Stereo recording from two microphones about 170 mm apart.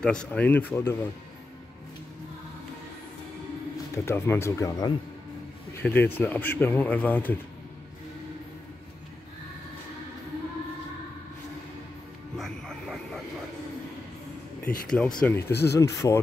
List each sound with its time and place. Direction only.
0.0 s speech: 5° left (ahead or behind)
3.9 s speech: 15° left (ahead or behind)
12.4 s a sound: centre (ahead or behind)
14.6 s speech: 5° left (ahead or behind)
15.5 s speech: 75° left (ahead or behind)
15.8 s speech: 15° left (ahead or behind)